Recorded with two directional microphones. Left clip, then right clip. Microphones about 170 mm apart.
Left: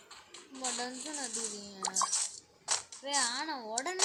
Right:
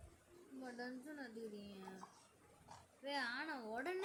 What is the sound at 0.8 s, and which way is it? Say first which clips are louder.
Speech: left 11 dB; 5° right (ahead or behind).